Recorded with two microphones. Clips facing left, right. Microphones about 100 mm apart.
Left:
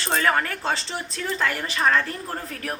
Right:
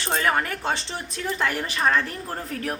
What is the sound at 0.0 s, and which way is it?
A woman's voice, 20° right (ahead or behind).